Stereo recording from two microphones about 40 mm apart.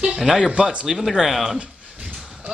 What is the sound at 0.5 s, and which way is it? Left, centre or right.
Speech, right.